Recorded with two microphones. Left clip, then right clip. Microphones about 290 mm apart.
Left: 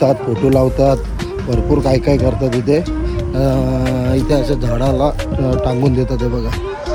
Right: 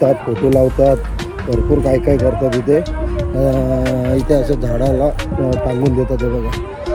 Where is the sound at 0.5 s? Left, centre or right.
Centre.